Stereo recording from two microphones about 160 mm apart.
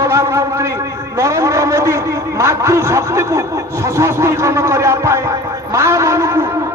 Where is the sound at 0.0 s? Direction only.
15° right (ahead or behind).